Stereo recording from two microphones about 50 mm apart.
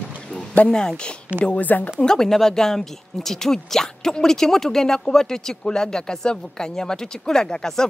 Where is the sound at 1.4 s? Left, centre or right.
Left.